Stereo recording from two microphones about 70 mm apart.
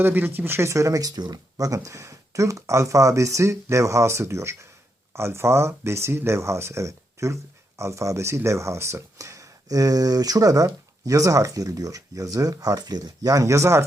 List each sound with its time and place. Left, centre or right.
0.0 s speech: right